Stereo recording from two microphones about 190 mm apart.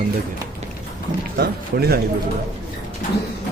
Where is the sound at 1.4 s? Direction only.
55° right (ahead or behind).